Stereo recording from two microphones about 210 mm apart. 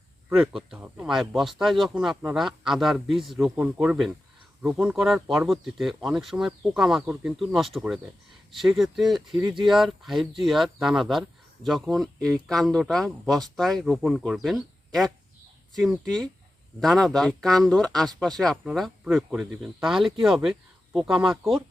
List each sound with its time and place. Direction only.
0.3 s speech: 5° right (ahead or behind)
9.4 s speech: 15° right (ahead or behind)
9.6 s speech: centre (ahead or behind)